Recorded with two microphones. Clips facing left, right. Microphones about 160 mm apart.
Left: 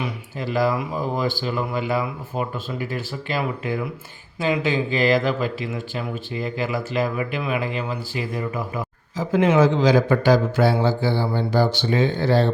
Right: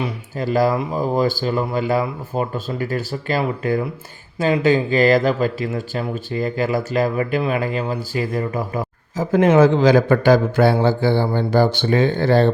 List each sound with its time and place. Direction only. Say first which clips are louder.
0.0 s speech: right 4 dB; 40° right (ahead or behind); by 12.5 s 55° right (ahead or behind)